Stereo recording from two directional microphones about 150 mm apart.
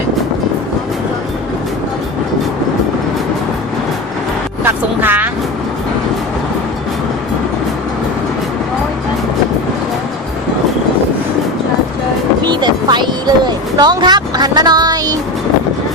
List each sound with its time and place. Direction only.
4.6 s vehicle: 15° right (ahead or behind)
12.5 s vehicle: 30° right (ahead or behind)
13.7 s speech: 30° right (ahead or behind)